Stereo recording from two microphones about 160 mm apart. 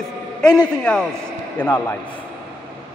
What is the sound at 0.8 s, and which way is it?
A man's voice, 5° left (ahead or behind).